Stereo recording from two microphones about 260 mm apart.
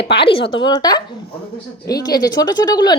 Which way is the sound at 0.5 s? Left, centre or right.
Centre.